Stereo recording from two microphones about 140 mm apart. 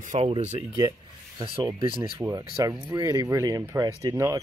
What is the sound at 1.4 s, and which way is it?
Speech, 40° right (ahead or behind).